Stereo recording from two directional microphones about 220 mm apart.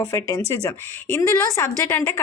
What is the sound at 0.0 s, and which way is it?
A woman's voice, 15° left (ahead or behind).